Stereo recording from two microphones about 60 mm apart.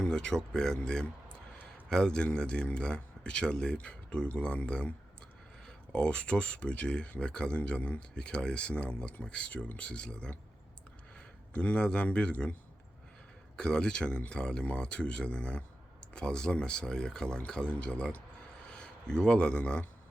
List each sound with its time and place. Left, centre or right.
0.0 s speech: centre
11.5 s speech: centre
13.6 s speech: centre